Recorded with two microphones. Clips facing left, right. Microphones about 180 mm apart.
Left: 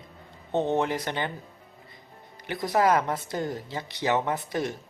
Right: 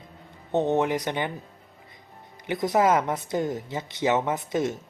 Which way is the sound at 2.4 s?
20° right (ahead or behind).